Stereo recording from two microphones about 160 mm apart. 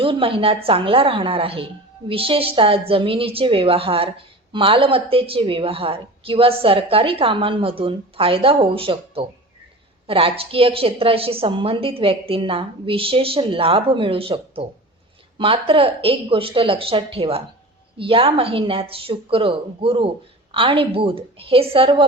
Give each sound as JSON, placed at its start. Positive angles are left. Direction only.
{"t": 0.0, "sound": "a woman's voice", "side_deg": -35}